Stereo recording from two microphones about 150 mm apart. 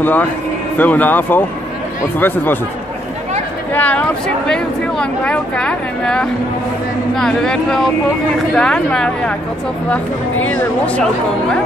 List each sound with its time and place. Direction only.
0.0 s speech: 10° left (ahead or behind)
3.7 s speech: 10° left (ahead or behind)
10.4 s speech: 10° left (ahead or behind)